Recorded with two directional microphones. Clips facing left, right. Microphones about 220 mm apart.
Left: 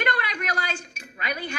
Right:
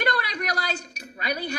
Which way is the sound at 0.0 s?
40° right (ahead or behind).